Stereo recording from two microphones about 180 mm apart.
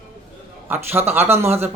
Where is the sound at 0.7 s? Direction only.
10° right (ahead or behind).